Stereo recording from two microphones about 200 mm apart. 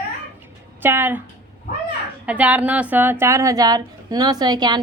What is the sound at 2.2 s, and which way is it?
A woman's voice, 5° right (ahead or behind).